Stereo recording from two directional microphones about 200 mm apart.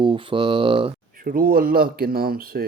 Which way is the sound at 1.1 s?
45° right (ahead or behind).